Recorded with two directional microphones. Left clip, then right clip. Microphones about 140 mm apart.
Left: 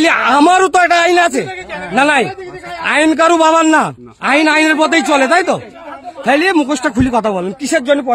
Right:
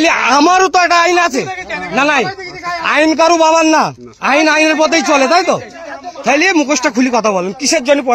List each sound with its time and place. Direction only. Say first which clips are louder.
0.4 s a man's voice: left 1 dB; 45° left (ahead or behind)
3.1 s a man's voice: even; 50° left (ahead or behind)
6.2 s speech: right 1 dB; 25° left (ahead or behind)
6.8 s speech: right 2 dB; 15° left (ahead or behind)
7.1 s speech: right 2 dB; 25° left (ahead or behind)